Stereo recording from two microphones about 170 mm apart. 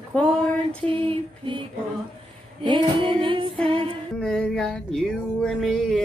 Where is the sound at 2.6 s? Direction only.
30° right (ahead or behind).